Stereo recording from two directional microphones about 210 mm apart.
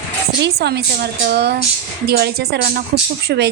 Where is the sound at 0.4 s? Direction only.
50° right (ahead or behind).